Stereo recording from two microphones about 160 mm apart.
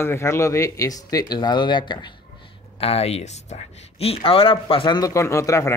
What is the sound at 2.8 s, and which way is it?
Speech, 40° left (ahead or behind).